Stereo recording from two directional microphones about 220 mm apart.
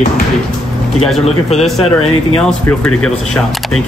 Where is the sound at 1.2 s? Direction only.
30° left (ahead or behind).